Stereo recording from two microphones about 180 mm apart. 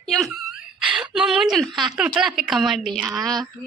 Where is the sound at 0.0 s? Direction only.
Centre (ahead or behind).